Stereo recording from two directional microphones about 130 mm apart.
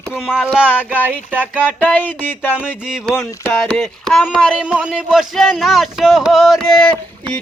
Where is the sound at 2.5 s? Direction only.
5° right (ahead or behind).